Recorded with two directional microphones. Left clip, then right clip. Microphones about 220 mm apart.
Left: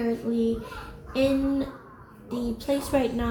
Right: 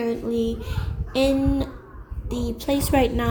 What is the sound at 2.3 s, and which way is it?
A woman's voice, 50° right (ahead or behind).